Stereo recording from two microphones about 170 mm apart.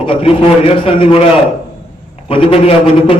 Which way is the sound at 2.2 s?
30° left (ahead or behind).